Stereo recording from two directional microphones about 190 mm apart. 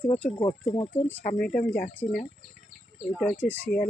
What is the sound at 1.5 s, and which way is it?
Speech, 50° left (ahead or behind).